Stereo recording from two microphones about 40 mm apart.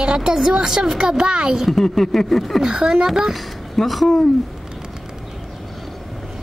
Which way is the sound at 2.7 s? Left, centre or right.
Right.